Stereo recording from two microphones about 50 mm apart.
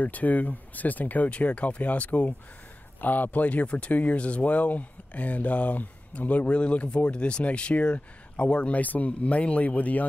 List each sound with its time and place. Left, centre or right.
0.0 s speech: left